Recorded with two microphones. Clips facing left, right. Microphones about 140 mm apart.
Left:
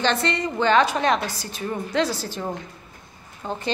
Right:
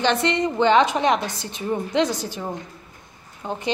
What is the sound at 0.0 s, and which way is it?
A woman's voice, 15° right (ahead or behind).